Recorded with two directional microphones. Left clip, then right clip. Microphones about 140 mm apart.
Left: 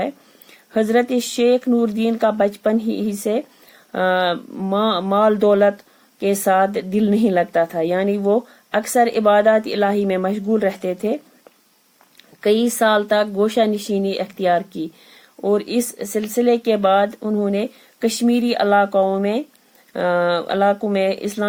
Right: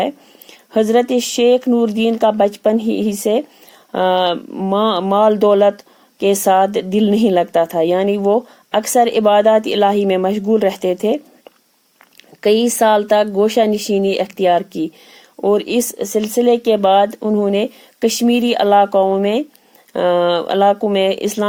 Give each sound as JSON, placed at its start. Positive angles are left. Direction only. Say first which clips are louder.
{"t": 0.7, "sound": "speech", "louder": "right 4 dB", "side_deg": -45}
{"t": 12.4, "sound": "speech", "louder": "right 4 dB", "side_deg": -45}